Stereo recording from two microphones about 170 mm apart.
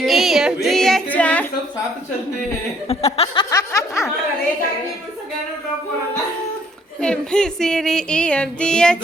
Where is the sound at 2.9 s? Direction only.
35° left (ahead or behind).